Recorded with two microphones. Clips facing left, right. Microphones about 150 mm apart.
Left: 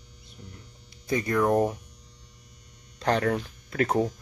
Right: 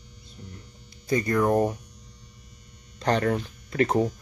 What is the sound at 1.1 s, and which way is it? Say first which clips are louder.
Speech: right 1 dB; centre (ahead or behind).